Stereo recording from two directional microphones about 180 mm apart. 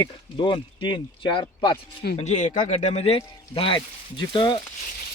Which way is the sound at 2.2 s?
40° left (ahead or behind).